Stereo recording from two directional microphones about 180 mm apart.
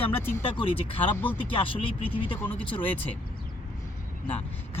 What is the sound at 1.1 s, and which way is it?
Speech, 10° left (ahead or behind).